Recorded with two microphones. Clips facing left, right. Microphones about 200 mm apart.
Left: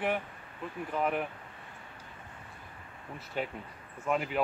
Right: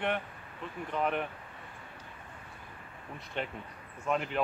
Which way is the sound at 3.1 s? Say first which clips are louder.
Left 2 dB; 5° left (ahead or behind).